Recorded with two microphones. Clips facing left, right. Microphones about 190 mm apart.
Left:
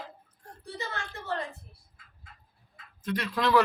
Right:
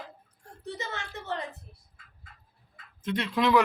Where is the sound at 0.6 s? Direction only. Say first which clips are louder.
Right 1 dB; 20° right (ahead or behind).